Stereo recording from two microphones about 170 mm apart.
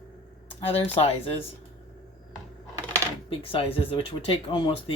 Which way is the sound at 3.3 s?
35° left (ahead or behind).